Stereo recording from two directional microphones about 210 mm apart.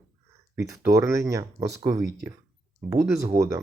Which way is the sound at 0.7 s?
10° right (ahead or behind).